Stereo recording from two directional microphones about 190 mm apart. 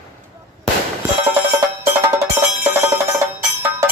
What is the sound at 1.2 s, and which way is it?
Music, 15° right (ahead or behind).